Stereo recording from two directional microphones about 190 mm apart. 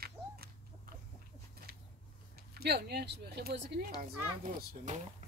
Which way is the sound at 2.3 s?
55° right (ahead or behind).